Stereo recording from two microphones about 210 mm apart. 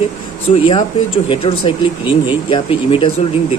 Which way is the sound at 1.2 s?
25° left (ahead or behind).